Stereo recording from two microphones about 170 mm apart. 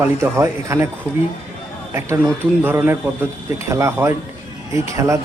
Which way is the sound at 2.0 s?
15° right (ahead or behind).